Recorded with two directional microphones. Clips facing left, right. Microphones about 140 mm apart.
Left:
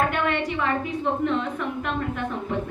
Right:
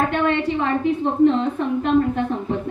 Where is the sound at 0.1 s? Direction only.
30° right (ahead or behind).